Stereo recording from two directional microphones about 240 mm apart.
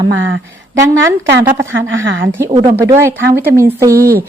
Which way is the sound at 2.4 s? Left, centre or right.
Centre.